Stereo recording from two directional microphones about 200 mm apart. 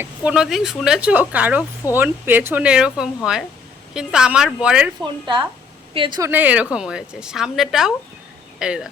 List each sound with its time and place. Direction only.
0.0 s speech: 5° right (ahead or behind)
5.0 s a woman's voice: 25° right (ahead or behind); by 8.9 s 5° right (ahead or behind)